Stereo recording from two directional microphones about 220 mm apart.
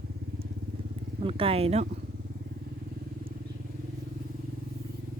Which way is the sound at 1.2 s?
25° right (ahead or behind).